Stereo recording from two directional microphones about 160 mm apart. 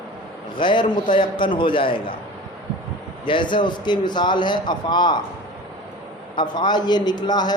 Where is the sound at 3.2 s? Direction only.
30° left (ahead or behind).